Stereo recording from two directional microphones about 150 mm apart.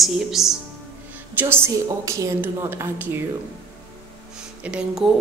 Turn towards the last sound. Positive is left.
turn(degrees=-5)  # may be behind; listen again after turning